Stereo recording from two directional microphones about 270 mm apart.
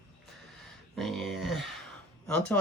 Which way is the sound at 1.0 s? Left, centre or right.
Centre.